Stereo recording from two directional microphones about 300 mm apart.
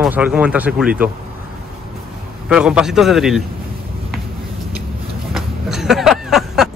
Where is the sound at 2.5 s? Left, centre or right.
Centre.